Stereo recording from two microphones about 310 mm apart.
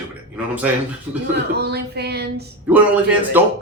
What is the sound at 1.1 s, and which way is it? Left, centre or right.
Speech, centre.